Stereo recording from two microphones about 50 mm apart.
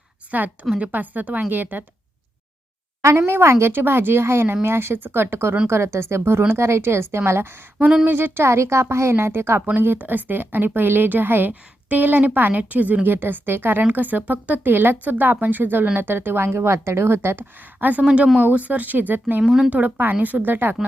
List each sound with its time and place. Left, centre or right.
0.3 s a woman's voice: right
3.0 s a woman's voice: right
3.4 s speech: right
8.0 s speech: right
8.4 s a woman's voice: right
9.6 s a woman's voice: right
17.7 s a woman's voice: right
19.4 s speech: centre
19.7 s a woman's voice: right